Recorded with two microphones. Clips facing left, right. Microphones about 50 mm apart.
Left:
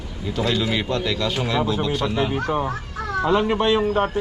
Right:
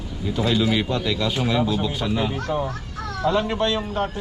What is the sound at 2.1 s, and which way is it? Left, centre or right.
A child's voice, centre.